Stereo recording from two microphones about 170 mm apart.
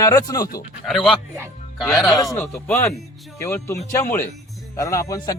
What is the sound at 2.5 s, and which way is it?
A man's voice, 5° left (ahead or behind).